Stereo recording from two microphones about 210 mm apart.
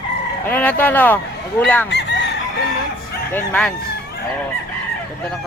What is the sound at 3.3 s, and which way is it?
Speech, 5° left (ahead or behind).